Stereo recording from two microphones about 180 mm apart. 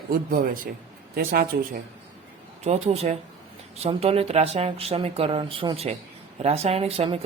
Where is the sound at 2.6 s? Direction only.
35° right (ahead or behind).